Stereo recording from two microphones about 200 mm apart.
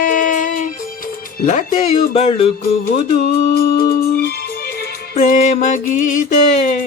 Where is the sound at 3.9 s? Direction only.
50° left (ahead or behind).